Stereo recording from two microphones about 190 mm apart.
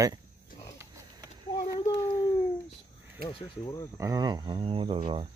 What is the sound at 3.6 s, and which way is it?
Speech, 20° left (ahead or behind).